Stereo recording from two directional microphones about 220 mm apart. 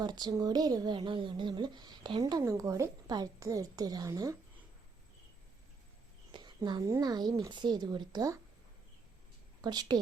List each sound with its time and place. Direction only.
0.0 s speech: 20° right (ahead or behind)
6.3 s a woman's voice: 20° right (ahead or behind)
9.6 s a woman's voice: 20° right (ahead or behind)